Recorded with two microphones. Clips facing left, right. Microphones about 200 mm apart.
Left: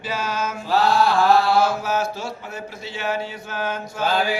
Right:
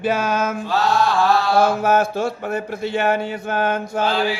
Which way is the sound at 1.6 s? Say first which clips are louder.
Right 5 dB; 55° right (ahead or behind).